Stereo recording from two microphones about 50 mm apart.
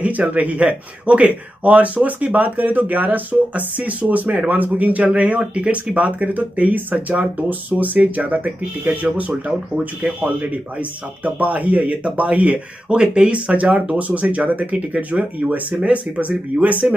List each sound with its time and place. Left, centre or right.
0.0 s speech: right
11.2 s speech: right